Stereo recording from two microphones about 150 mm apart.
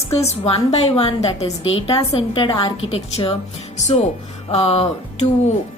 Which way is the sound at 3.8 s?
50° left (ahead or behind).